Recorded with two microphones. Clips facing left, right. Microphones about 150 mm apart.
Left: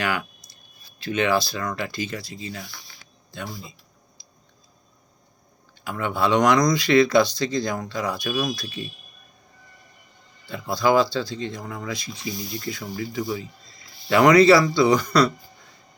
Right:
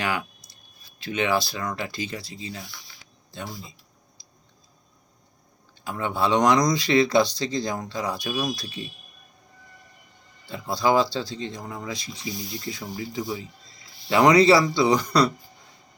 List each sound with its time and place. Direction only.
0.0 s speech: 20° right (ahead or behind)
2.7 s a sound: 50° left (ahead or behind)
5.8 s speech: 25° right (ahead or behind)
10.4 s speech: 25° right (ahead or behind)